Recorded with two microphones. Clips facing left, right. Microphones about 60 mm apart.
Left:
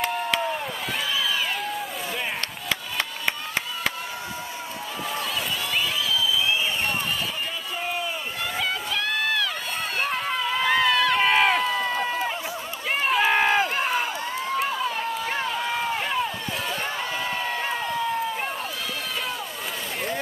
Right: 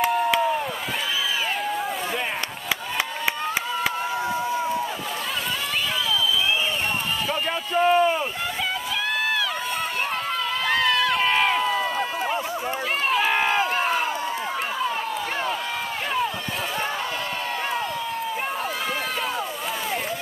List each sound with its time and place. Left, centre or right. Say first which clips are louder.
0.0 s rowboat: right 5 dB; centre
7.8 s rowboat: right 12 dB; right
10.6 s run: left 1 dB; centre